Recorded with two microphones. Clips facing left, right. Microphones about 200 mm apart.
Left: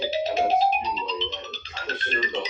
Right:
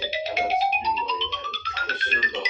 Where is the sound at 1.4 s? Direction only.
30° left (ahead or behind).